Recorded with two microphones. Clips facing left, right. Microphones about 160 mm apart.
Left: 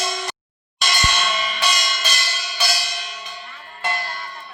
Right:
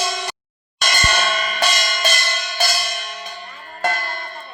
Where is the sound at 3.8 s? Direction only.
45° right (ahead or behind).